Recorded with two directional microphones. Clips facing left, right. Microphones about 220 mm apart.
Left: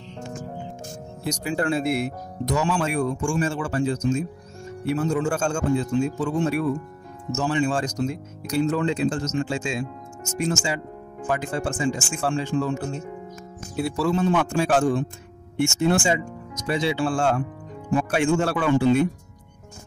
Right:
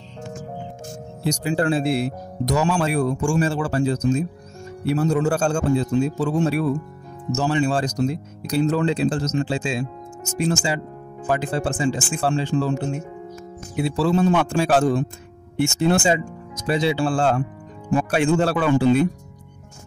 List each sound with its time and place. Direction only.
1.2 s speech: 30° right (ahead or behind)